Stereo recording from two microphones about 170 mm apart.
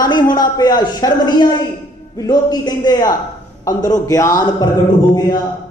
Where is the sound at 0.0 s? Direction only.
25° left (ahead or behind).